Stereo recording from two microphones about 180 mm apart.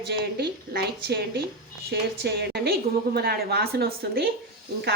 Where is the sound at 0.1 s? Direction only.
65° right (ahead or behind).